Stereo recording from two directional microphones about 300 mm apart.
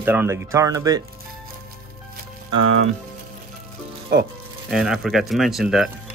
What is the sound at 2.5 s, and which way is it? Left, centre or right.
Speech, right.